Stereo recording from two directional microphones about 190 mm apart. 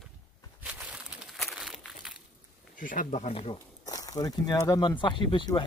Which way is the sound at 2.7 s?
45° left (ahead or behind).